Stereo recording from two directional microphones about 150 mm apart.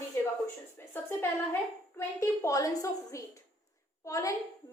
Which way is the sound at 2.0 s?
20° left (ahead or behind).